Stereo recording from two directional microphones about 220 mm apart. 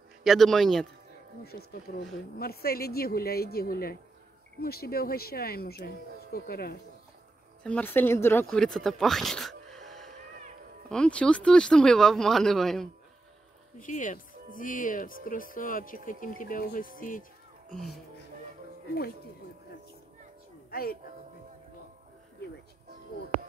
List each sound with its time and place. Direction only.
0.2 s speech: centre (ahead or behind)
1.4 s speech: 45° left (ahead or behind)
7.6 s speech: 5° left (ahead or behind)
13.7 s speech: 35° left (ahead or behind)
17.6 s speech: centre (ahead or behind)
20.7 s speech: 45° left (ahead or behind)